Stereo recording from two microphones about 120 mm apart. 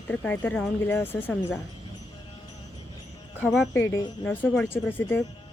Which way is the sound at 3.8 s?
25° left (ahead or behind).